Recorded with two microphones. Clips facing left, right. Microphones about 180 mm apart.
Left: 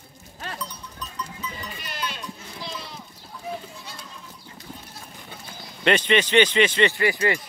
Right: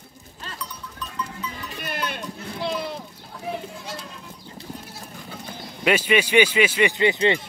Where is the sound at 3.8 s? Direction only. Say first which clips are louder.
Right 6 dB; 90° right.